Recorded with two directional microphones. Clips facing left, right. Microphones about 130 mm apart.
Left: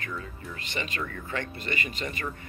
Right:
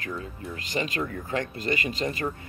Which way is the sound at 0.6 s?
40° right (ahead or behind).